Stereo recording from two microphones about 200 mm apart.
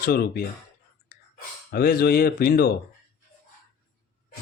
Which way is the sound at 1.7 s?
50° left (ahead or behind).